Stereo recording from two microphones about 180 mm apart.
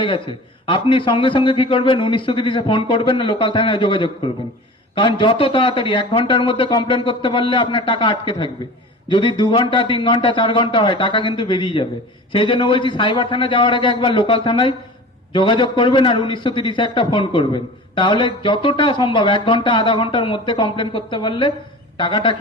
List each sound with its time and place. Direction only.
0.0 s a man's voice: 25° left (ahead or behind)